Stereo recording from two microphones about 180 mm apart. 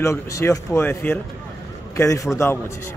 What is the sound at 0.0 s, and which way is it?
A man's voice, 15° left (ahead or behind).